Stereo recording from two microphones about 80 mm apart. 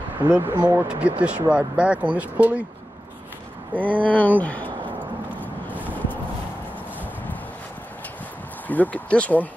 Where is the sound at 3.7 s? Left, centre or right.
Right.